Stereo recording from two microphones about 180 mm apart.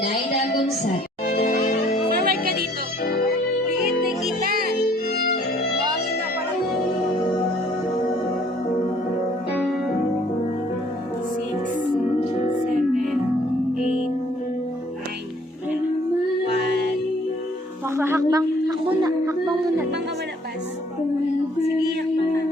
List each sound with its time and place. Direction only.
1.3 s music: 60° left (ahead or behind)
2.2 s music: 55° right (ahead or behind)
3.0 s music: 60° left (ahead or behind)
5.1 s violin: 60° left (ahead or behind)
17.9 s a sound: 15° right (ahead or behind)